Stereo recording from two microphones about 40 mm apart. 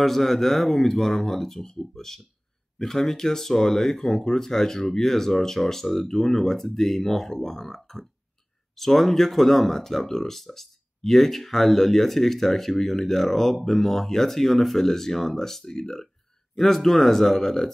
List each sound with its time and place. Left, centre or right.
0.0 s speech: centre